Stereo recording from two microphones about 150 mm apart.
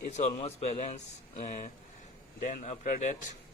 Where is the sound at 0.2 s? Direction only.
45° left (ahead or behind).